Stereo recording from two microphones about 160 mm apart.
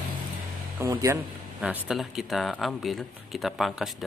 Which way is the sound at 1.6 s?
5° right (ahead or behind).